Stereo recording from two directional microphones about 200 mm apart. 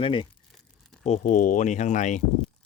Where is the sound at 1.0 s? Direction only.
35° left (ahead or behind).